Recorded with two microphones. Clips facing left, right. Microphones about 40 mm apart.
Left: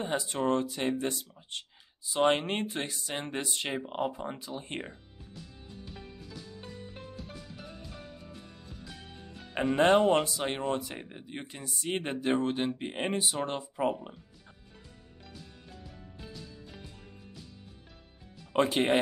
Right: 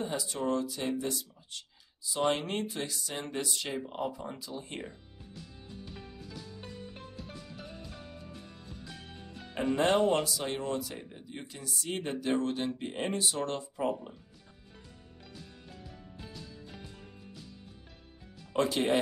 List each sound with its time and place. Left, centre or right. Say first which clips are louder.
0.0 s speech: left 3 dB; left
5.7 s music: even; centre
9.8 s speech: left 4 dB; left
18.5 s speech: left 2 dB; left